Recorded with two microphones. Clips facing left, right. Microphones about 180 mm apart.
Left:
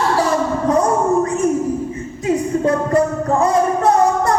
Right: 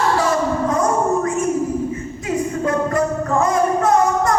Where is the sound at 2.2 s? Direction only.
35° left (ahead or behind).